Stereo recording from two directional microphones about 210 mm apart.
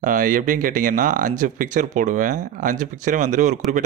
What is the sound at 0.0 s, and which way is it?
Speech, 40° right (ahead or behind).